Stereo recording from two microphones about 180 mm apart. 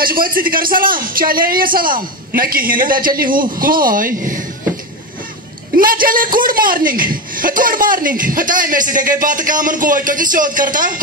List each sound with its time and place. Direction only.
0.0 s a man's voice: 55° right (ahead or behind)
5.8 s a man's voice: 50° right (ahead or behind)